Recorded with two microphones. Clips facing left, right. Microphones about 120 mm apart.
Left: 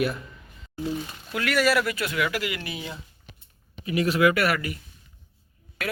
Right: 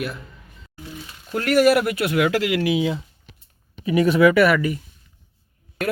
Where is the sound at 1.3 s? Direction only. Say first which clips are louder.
Right 7 dB; 45° right (ahead or behind); by 3.0 s 90° right.